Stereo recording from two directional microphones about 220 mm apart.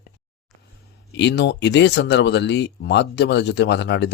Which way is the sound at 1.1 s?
50° left (ahead or behind).